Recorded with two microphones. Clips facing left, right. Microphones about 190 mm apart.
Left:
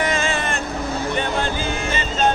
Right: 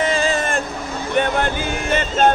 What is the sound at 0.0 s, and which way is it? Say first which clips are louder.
Hubbub: right 3 dB; 35° right (ahead or behind).